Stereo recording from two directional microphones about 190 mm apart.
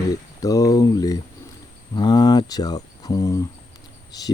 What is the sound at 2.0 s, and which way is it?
Speech, 20° left (ahead or behind).